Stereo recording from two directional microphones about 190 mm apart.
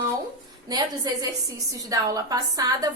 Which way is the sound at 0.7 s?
20° right (ahead or behind).